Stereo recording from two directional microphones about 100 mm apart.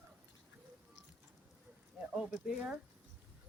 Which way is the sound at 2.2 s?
5° right (ahead or behind).